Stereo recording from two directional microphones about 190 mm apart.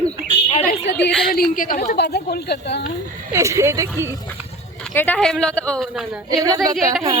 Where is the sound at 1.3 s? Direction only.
50° left (ahead or behind).